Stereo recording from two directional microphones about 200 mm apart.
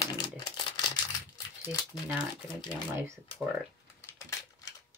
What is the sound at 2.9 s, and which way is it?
Speech, 15° right (ahead or behind).